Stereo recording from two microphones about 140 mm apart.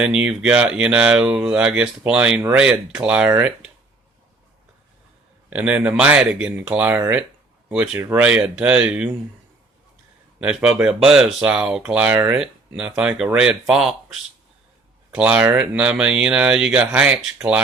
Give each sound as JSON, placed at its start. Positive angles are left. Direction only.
{"t": 0.0, "sound": "speech", "side_deg": -5}
{"t": 5.5, "sound": "speech", "side_deg": -10}
{"t": 10.4, "sound": "speech", "side_deg": -5}